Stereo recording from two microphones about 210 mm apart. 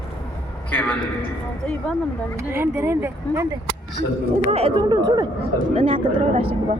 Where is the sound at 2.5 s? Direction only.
10° right (ahead or behind).